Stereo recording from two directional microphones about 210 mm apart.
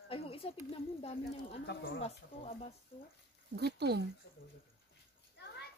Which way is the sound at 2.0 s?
30° left (ahead or behind).